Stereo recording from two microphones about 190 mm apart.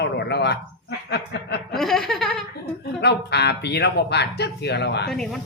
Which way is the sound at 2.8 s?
60° left (ahead or behind).